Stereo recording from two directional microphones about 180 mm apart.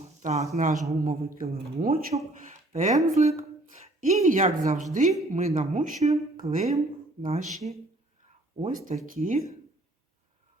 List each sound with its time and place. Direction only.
0.2 s a man's voice: 40° right (ahead or behind)
2.5 s a sound: 40° right (ahead or behind)
3.2 s a man's voice: 40° right (ahead or behind)